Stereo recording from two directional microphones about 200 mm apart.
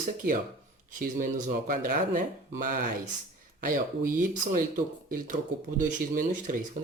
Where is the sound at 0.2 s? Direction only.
45° right (ahead or behind).